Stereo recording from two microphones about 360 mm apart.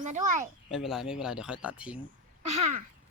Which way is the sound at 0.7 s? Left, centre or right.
Centre.